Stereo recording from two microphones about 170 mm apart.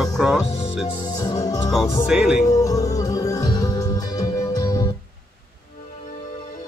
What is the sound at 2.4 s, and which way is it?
Music, 20° left (ahead or behind).